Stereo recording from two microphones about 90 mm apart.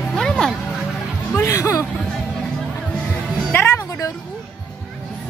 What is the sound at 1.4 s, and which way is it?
Speech, 30° left (ahead or behind).